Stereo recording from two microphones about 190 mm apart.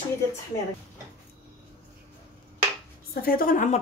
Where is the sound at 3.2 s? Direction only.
50° left (ahead or behind).